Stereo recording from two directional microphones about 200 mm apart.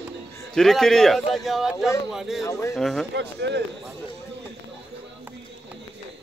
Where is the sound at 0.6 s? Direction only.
Centre (ahead or behind).